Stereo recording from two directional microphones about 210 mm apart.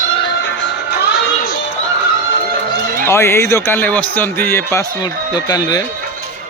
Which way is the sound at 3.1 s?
10° left (ahead or behind).